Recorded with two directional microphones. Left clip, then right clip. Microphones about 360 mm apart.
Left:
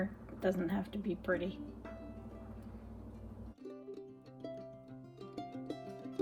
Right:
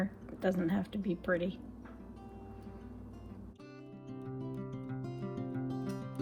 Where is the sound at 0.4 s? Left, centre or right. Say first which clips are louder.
Right 2 dB; right.